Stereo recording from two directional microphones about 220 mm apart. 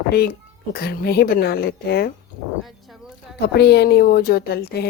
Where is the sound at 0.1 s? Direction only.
45° left (ahead or behind).